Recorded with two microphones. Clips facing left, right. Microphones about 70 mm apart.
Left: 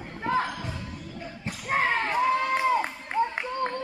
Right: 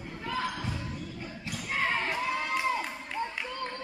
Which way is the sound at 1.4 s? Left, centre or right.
Left.